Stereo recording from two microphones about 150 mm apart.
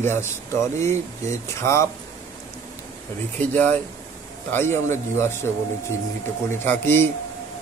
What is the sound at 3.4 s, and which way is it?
Speech, 10° left (ahead or behind).